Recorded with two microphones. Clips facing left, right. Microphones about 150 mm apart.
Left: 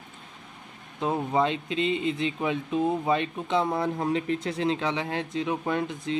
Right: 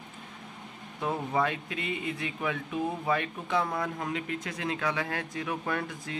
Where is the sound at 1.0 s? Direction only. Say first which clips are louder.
Left 4 dB; 20° left (ahead or behind).